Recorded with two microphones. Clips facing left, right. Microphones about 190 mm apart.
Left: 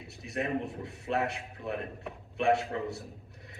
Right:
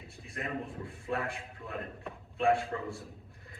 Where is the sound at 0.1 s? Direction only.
75° left (ahead or behind).